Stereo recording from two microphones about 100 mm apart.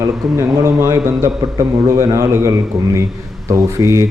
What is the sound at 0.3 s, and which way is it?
A man's voice, 30° right (ahead or behind).